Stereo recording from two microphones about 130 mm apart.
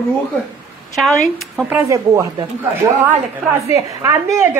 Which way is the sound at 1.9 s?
25° right (ahead or behind).